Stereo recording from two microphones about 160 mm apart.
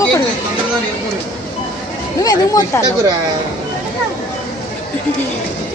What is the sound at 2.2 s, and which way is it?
Speech, 25° left (ahead or behind).